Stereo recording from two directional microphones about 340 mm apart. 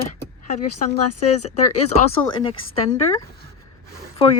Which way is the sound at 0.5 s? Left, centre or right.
Left.